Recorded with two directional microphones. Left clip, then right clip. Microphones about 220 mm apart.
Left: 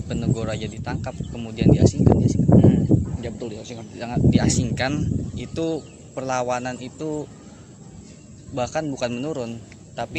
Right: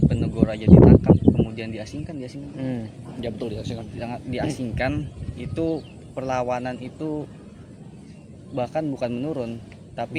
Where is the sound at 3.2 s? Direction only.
40° right (ahead or behind).